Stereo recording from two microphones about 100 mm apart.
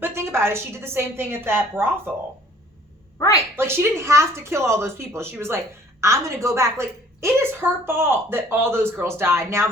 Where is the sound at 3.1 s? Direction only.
30° left (ahead or behind).